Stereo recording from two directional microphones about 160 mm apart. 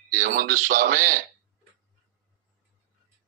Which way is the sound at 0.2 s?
55° right (ahead or behind).